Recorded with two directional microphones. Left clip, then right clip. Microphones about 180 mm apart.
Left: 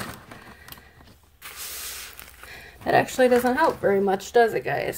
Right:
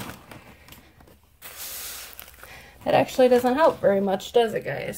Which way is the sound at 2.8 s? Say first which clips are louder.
Right 1 dB; 40° left (ahead or behind).